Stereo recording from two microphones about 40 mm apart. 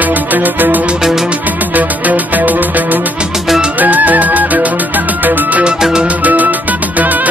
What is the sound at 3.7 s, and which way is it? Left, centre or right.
Music, right.